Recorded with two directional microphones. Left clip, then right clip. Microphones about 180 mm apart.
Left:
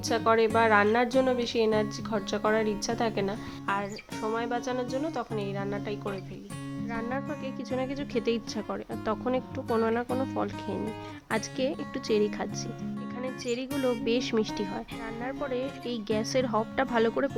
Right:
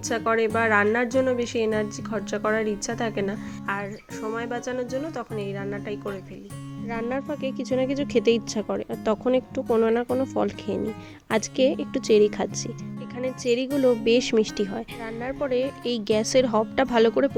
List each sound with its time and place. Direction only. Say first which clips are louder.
0.0 s speech: right 1 dB; 5° right (ahead or behind)
6.8 s speech: right 5 dB; 25° right (ahead or behind)